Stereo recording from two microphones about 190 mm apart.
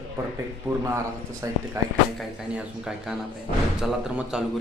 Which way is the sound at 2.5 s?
5° right (ahead or behind).